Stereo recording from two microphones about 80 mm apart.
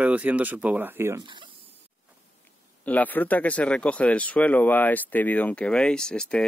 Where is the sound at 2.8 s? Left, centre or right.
Left.